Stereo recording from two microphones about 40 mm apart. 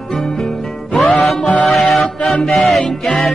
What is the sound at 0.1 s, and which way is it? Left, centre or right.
Music, centre.